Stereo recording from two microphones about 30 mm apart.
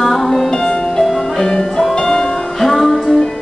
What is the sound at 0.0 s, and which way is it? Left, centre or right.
Music, centre.